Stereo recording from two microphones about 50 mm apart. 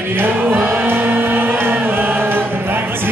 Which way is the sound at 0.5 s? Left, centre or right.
Right.